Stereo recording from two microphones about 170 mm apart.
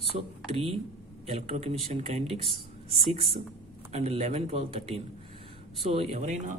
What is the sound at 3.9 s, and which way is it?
Speech, 35° right (ahead or behind).